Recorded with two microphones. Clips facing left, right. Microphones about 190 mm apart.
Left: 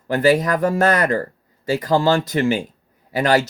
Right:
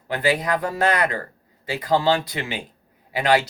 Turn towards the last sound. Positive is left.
turn(degrees=45)  # may be behind; listen again after turning